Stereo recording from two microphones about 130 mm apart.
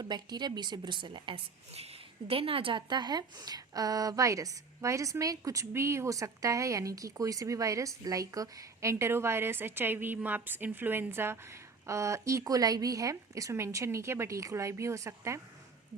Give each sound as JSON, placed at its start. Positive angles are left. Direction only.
{"t": 0.0, "sound": "a woman's voice", "side_deg": -35}
{"t": 1.7, "sound": "a woman's voice", "side_deg": -50}